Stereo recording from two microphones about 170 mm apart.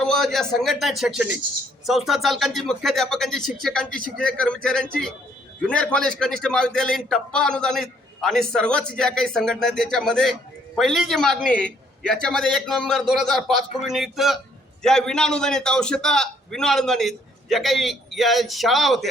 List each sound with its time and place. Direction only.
0.0 s a man's voice: centre (ahead or behind)